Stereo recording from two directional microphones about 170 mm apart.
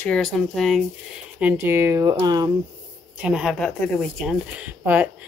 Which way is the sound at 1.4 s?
15° right (ahead or behind).